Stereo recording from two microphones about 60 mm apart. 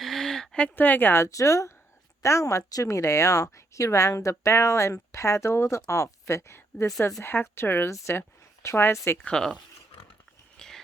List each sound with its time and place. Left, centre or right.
0.0 s a sound: centre
0.8 s a woman's voice: left
1.2 s speech: left
2.8 s a woman's voice: left
9.3 s speech: centre
10.6 s a sound: centre